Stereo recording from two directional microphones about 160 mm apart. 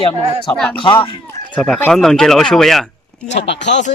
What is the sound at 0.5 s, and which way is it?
Speech, 5° left (ahead or behind).